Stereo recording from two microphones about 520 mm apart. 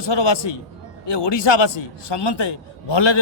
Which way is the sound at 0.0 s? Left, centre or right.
Left.